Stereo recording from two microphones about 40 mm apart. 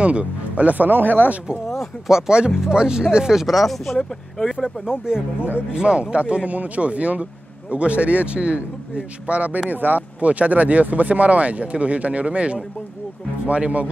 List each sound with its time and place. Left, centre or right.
0.0 s speech: right
2.0 s speech: centre
3.3 s speech: centre
4.6 s speech: centre
5.8 s speech: right
9.7 s speech: right